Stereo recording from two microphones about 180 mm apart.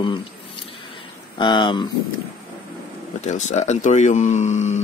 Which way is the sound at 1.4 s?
25° left (ahead or behind).